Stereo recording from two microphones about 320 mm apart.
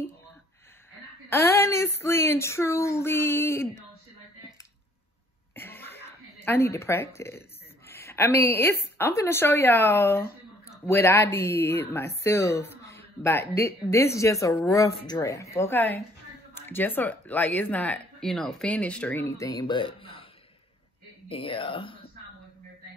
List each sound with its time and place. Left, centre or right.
1.3 s speech: centre
5.6 s cough: centre
6.0 s a sound: centre
7.2 s a woman's voice: centre
21.3 s speech: centre